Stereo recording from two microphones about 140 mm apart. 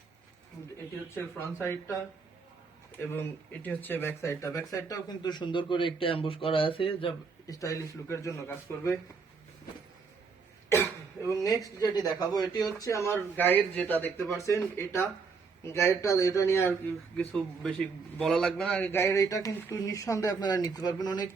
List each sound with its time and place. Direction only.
1.1 s a man's voice: 15° left (ahead or behind)
3.6 s a man's voice: 15° left (ahead or behind); by 7.1 s 40° left (ahead or behind)
7.4 s speech: 25° left (ahead or behind)
11.4 s speech: 25° left (ahead or behind)
17.2 s a man's voice: 5° left (ahead or behind); by 21.2 s 30° left (ahead or behind)